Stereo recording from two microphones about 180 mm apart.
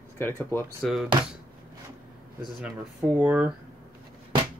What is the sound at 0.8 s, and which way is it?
Speech, centre (ahead or behind).